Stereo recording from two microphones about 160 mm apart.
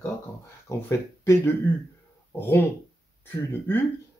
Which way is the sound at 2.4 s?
15° left (ahead or behind).